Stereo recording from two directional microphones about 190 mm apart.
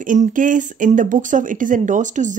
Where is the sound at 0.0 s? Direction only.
45° right (ahead or behind).